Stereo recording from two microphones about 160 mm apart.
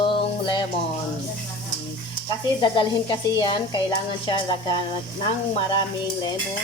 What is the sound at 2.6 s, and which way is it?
Speech, 30° left (ahead or behind).